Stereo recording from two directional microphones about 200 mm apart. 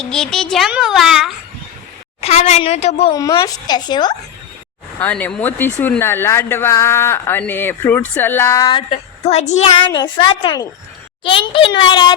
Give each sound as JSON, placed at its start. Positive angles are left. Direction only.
{"t": 0.0, "sound": "a child's voice", "side_deg": 5}
{"t": 2.2, "sound": "a woman's voice", "side_deg": 35}
{"t": 3.1, "sound": "a woman's voice", "side_deg": 20}
{"t": 4.9, "sound": "speech", "side_deg": 10}
{"t": 8.9, "sound": "a woman's voice", "side_deg": 30}